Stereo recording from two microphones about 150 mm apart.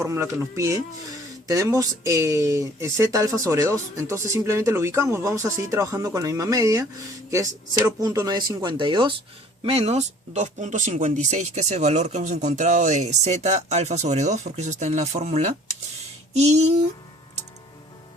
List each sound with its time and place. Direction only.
0.0 s speech: 20° right (ahead or behind); by 16.8 s 45° right (ahead or behind)